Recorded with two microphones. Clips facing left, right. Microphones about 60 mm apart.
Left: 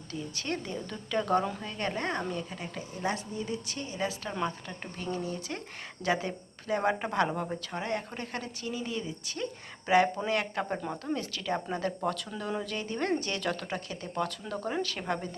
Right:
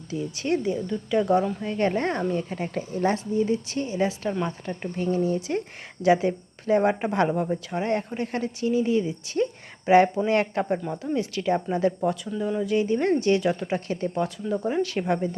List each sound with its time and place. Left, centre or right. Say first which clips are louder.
0.1 s speech: right 9 dB; centre
1.6 s a woman's voice: right 9 dB; right
4.3 s speech: right 5 dB; centre
4.9 s a woman's voice: right 10 dB; right
11.5 s speech: right 8 dB; centre
12.3 s speech: right 7 dB; centre
12.6 s speech: right 13 dB; centre
13.7 s a woman's voice: right 10 dB; right
14.1 s speech: right 3 dB; centre
14.8 s speech: right 8 dB; right